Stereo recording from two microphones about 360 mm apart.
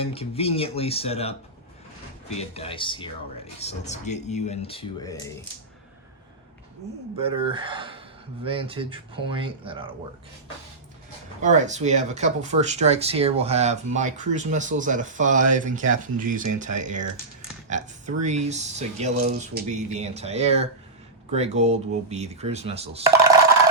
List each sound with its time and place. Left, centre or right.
0.0 s speech: centre
2.4 s speech: centre
7.2 s speech: centre
11.4 s speech: centre